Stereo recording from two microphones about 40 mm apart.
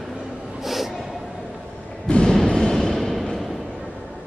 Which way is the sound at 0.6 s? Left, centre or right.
Centre.